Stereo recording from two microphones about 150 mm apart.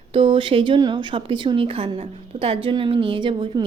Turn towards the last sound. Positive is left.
turn(degrees=-35)  # may be behind; listen again after turning